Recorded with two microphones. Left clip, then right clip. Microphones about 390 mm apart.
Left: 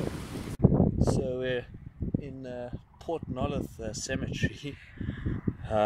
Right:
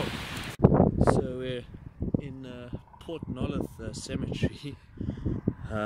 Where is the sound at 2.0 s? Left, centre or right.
Right.